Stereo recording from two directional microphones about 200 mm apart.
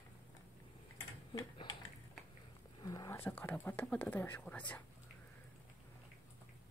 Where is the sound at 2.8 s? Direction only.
20° left (ahead or behind).